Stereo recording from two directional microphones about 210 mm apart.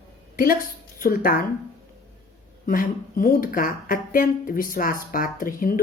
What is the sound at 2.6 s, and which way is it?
Speech, 40° left (ahead or behind).